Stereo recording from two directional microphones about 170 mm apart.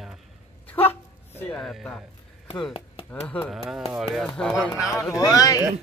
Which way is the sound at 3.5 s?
Centre (ahead or behind).